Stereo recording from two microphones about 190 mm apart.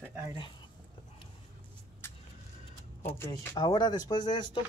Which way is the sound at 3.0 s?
10° left (ahead or behind).